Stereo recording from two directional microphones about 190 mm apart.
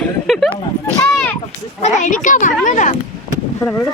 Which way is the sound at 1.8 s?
40° left (ahead or behind).